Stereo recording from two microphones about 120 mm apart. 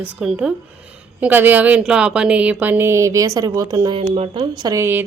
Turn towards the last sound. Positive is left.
turn(degrees=-20)  # may be behind; listen again after turning